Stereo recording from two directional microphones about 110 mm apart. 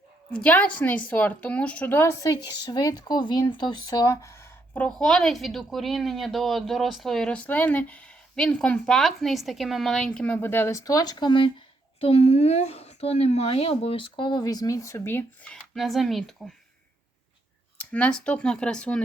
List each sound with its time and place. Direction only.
0.3 s a woman's voice: 15° left (ahead or behind)
4.9 s speech: 5° left (ahead or behind); by 11.5 s 50° left (ahead or behind)
11.9 s a woman's voice: 65° left (ahead or behind); by 15.2 s 25° left (ahead or behind)
15.4 s speech: centre (ahead or behind)
17.7 s a woman's voice: 10° left (ahead or behind)